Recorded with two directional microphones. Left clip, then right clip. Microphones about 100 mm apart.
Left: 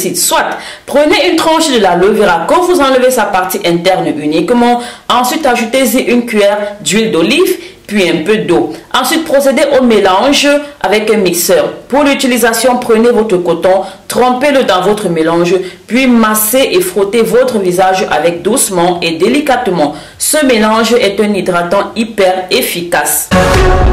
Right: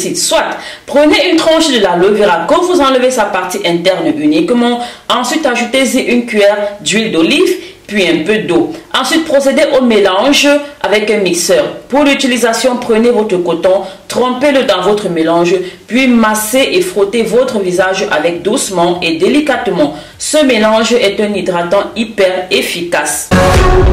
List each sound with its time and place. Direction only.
0.0 s speech: 30° left (ahead or behind)